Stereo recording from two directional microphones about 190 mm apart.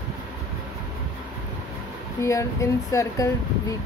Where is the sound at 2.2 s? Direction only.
15° left (ahead or behind).